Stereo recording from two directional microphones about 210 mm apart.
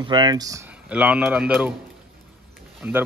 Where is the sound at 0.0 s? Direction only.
20° right (ahead or behind).